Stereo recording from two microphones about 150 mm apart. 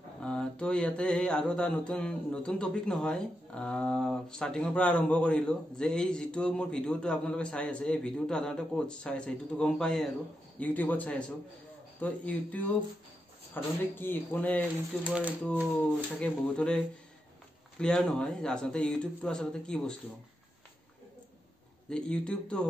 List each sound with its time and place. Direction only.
0.2 s mantra: 5° left (ahead or behind)
13.5 s mantra: 10° left (ahead or behind)
15.0 s speech: 5° right (ahead or behind)
16.2 s mantra: 5° left (ahead or behind)
17.7 s speech: 5° left (ahead or behind)
21.8 s speech: 5° left (ahead or behind)